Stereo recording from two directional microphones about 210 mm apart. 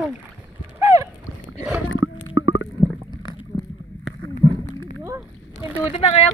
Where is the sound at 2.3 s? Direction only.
70° left (ahead or behind).